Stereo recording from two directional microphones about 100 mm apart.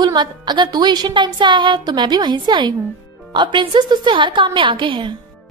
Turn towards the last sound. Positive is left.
turn(degrees=-55)  # may be behind; listen again after turning